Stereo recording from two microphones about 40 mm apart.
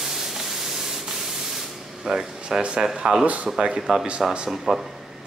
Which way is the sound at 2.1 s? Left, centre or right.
Centre.